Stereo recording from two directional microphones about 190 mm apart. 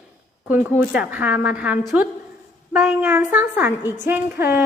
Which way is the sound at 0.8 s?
10° right (ahead or behind).